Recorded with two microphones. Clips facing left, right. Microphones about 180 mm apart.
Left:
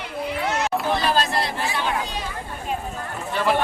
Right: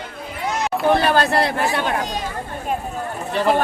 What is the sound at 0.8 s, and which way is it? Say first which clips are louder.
Speech: right 9 dB; 60° right (ahead or behind).